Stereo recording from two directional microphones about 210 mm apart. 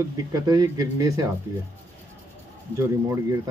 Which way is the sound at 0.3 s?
15° right (ahead or behind).